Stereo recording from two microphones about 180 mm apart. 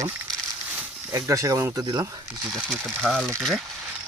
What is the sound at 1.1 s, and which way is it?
Speech, 15° right (ahead or behind).